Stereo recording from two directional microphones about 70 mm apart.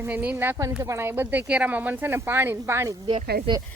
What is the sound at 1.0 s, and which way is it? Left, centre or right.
Speech, right.